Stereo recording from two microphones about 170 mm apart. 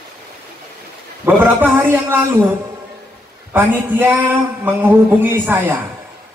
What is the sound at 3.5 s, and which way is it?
A man's voice, 10° right (ahead or behind).